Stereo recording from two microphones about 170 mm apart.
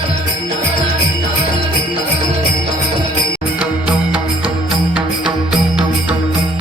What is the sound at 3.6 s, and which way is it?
Music, 10° right (ahead or behind).